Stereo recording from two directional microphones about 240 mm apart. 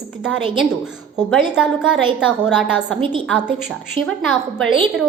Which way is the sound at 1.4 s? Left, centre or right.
Centre.